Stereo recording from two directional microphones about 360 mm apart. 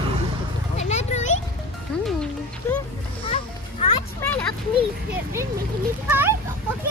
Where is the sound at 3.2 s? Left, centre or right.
Centre.